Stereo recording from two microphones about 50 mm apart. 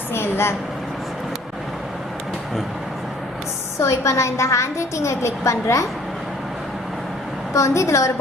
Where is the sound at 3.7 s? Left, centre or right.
Left.